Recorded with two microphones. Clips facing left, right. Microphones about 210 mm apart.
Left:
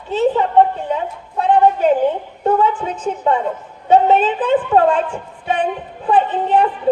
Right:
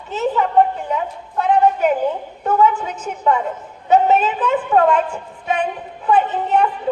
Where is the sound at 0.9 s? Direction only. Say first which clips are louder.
Left 1 dB; 30° left (ahead or behind).